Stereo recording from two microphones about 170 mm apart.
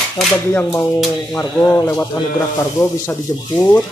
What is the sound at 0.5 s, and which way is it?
Speech, 15° left (ahead or behind).